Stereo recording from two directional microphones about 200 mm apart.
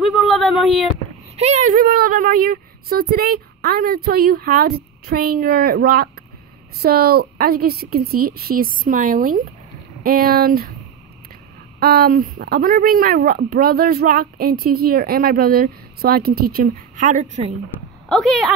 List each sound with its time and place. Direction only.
0.0 s a sound: centre (ahead or behind)
1.3 s speech: 35° right (ahead or behind)
11.8 s speech: 50° right (ahead or behind); by 17.6 s 35° right (ahead or behind)
18.0 s speech: centre (ahead or behind)